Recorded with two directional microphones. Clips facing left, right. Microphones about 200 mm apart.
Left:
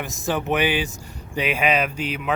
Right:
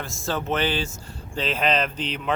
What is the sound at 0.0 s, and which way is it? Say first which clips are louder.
Speech: left 3 dB; 15° left (ahead or behind).